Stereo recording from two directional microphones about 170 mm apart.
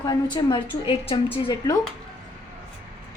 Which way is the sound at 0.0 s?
25° left (ahead or behind).